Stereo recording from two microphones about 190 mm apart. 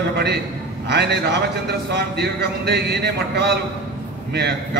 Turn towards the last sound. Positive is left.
turn(degrees=-60)  # may be behind; listen again after turning